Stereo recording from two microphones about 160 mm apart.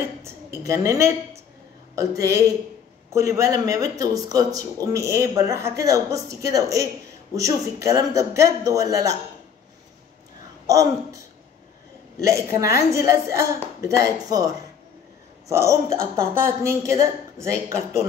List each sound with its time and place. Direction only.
0.2 s a woman's voice: 20° right (ahead or behind)
10.7 s a woman's voice: 20° right (ahead or behind)